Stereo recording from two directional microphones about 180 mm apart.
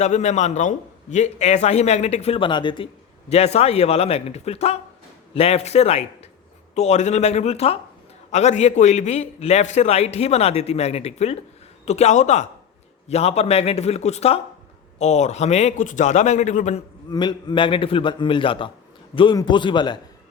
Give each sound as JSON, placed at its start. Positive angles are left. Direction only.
{"t": 0.0, "sound": "a man's voice", "side_deg": 40}
{"t": 17.1, "sound": "a man's voice", "side_deg": 25}